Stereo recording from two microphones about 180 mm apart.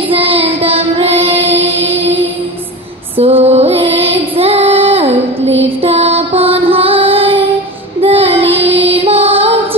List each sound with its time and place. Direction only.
0.1 s child singing: 30° right (ahead or behind)
3.2 s mantra: 30° right (ahead or behind)
5.6 s music: 35° right (ahead or behind)
8.0 s child singing: 30° right (ahead or behind)
9.0 s music: 30° right (ahead or behind)